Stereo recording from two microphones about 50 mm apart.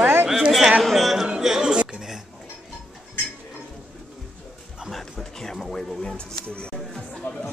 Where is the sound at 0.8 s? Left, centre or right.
Centre.